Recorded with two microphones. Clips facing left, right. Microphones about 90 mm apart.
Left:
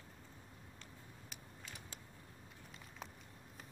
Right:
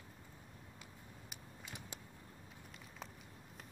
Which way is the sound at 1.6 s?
20° right (ahead or behind).